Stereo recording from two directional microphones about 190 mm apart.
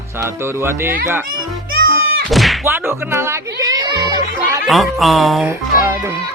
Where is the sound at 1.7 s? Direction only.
50° right (ahead or behind).